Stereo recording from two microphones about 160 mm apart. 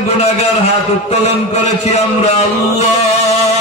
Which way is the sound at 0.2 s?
40° left (ahead or behind).